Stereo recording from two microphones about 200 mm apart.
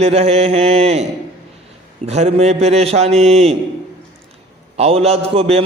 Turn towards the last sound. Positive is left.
turn(degrees=-30)  # may be behind; listen again after turning